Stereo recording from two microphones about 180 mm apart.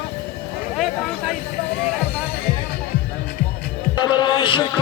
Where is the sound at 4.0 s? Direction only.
25° left (ahead or behind).